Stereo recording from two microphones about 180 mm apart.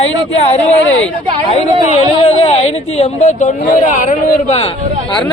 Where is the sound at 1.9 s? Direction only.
35° left (ahead or behind).